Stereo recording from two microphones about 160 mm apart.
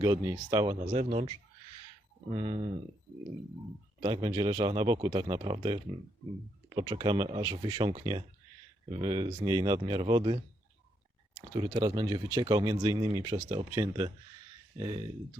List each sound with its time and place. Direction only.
0.0 s speech: 25° right (ahead or behind); by 1.3 s 40° right (ahead or behind)
2.3 s speech: 35° right (ahead or behind)
4.0 s speech: 30° right (ahead or behind)
11.5 s speech: 30° right (ahead or behind)